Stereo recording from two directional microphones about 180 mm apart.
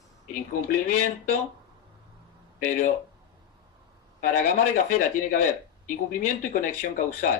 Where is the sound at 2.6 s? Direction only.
45° left (ahead or behind).